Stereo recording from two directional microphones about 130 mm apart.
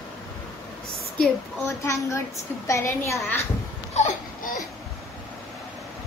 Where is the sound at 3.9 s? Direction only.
60° left (ahead or behind).